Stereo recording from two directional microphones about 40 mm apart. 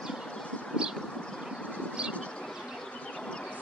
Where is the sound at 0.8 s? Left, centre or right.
Centre.